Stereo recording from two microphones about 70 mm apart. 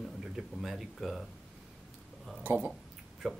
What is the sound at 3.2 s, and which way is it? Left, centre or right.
Speech, centre.